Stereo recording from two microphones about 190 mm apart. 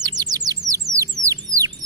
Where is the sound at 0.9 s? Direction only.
15° right (ahead or behind).